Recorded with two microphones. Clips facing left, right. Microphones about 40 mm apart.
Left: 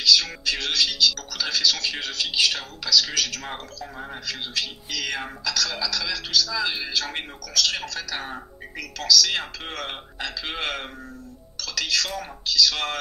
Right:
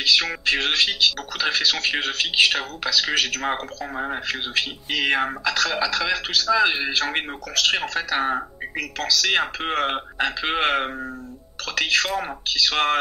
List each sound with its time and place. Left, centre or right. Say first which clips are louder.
0.0 s speech: right 1 dB; right